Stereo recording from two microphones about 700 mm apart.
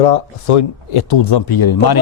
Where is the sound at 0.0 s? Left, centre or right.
Left.